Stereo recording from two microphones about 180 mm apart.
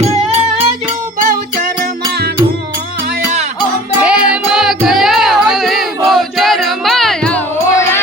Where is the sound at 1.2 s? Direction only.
45° right (ahead or behind).